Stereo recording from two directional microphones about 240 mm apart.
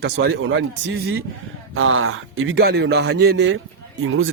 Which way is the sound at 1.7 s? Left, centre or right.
Right.